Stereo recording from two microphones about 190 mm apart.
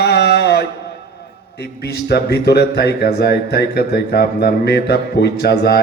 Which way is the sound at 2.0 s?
60° left (ahead or behind).